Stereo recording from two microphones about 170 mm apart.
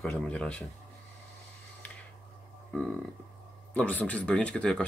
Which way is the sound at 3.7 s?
10° left (ahead or behind).